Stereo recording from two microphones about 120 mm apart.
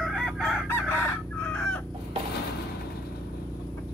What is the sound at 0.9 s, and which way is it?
Chicken, 20° left (ahead or behind).